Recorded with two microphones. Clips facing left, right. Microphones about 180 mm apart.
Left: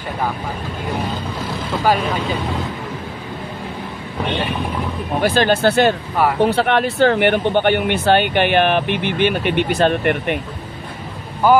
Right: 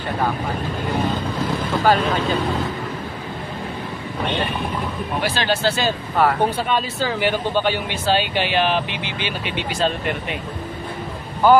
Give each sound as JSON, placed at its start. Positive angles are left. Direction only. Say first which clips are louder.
{"t": 5.2, "sound": "speech", "louder": "left 7 dB", "side_deg": 50}
{"t": 6.4, "sound": "speech", "louder": "left 5 dB", "side_deg": 70}